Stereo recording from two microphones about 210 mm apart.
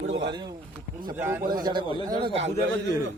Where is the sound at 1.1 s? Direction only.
10° right (ahead or behind).